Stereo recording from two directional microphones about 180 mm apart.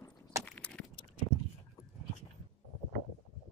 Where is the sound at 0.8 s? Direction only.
5° left (ahead or behind).